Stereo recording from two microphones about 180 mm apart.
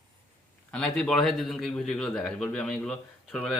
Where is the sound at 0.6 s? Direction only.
5° left (ahead or behind).